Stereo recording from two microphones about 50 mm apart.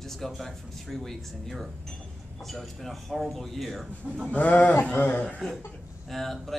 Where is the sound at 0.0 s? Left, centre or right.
Centre.